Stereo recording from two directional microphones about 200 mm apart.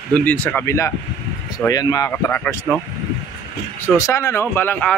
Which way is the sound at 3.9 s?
15° left (ahead or behind).